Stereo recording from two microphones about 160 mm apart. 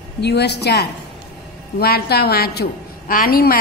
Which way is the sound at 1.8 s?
75° left (ahead or behind).